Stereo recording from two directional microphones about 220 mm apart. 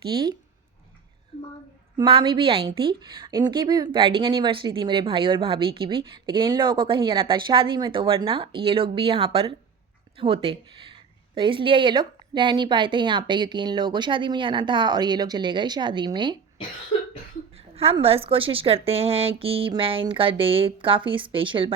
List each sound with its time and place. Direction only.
0.1 s speech: 20° right (ahead or behind)
1.3 s a sound: 30° left (ahead or behind)
2.0 s speech: 20° right (ahead or behind)
17.5 s speech: 25° right (ahead or behind)